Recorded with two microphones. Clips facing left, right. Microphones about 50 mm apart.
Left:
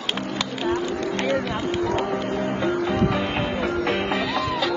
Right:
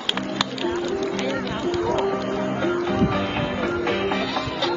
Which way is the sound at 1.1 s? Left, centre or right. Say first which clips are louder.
Left 2 dB; left.